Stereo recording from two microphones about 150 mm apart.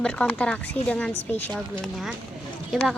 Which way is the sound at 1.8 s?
Centre (ahead or behind).